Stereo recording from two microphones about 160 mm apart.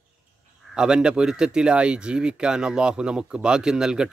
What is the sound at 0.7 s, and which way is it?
Speech, 5° right (ahead or behind).